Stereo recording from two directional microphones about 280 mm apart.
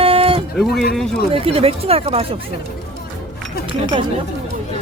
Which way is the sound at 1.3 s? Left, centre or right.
Centre.